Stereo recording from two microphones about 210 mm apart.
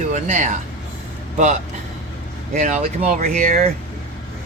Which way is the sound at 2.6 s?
35° right (ahead or behind).